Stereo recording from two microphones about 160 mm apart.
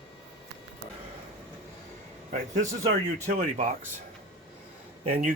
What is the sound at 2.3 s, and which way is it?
A man's voice, 50° right (ahead or behind).